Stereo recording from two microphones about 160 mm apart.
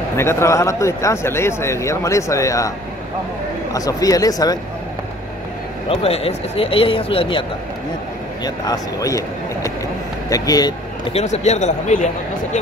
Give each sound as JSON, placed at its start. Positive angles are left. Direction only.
{"t": 0.2, "sound": "a man's voice", "side_deg": 15}
{"t": 3.7, "sound": "a man's voice", "side_deg": 20}
{"t": 5.9, "sound": "speech", "side_deg": 40}
{"t": 8.5, "sound": "a man's voice", "side_deg": 20}
{"t": 11.1, "sound": "a man's voice", "side_deg": 45}